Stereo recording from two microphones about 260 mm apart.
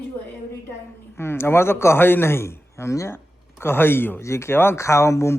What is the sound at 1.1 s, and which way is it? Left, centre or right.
A man's voice, centre.